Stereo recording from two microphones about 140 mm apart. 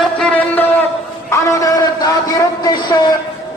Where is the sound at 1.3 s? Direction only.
25° left (ahead or behind).